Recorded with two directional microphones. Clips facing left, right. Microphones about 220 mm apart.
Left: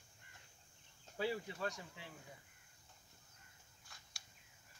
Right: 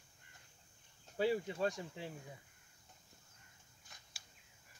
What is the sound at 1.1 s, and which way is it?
Speech, 25° right (ahead or behind).